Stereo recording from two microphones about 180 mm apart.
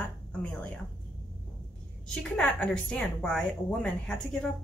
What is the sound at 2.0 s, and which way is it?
A woman's voice, 5° left (ahead or behind).